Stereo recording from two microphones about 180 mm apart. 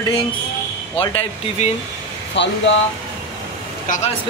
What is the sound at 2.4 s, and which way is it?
Speech, 75° left (ahead or behind).